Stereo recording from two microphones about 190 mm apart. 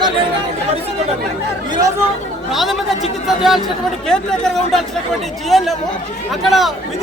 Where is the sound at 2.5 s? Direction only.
Centre (ahead or behind).